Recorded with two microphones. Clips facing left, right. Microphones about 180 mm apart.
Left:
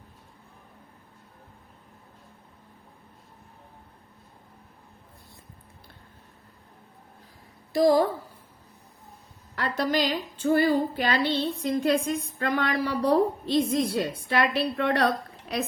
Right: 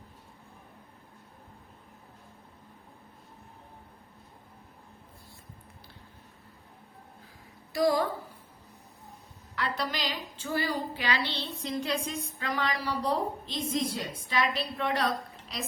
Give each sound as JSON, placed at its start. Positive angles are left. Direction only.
{"t": 7.7, "sound": "speech", "side_deg": 35}
{"t": 9.6, "sound": "a woman's voice", "side_deg": 45}